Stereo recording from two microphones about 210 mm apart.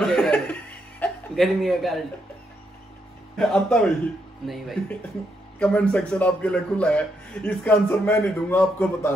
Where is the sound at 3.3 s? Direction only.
Centre (ahead or behind).